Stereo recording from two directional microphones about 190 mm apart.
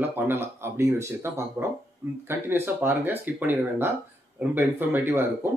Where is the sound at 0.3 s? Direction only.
10° right (ahead or behind).